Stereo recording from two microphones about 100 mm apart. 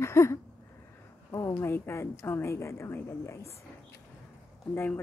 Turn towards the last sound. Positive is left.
turn(degrees=20)  # may be behind; listen again after turning